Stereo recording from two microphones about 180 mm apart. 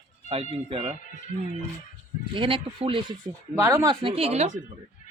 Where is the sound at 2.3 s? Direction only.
30° right (ahead or behind).